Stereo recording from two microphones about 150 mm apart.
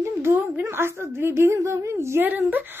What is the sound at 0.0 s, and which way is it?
A woman's voice, 15° right (ahead or behind).